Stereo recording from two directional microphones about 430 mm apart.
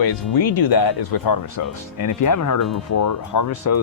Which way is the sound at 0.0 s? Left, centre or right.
Left.